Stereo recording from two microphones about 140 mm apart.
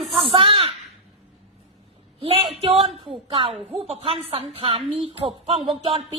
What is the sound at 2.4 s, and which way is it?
A woman's voice, 45° right (ahead or behind).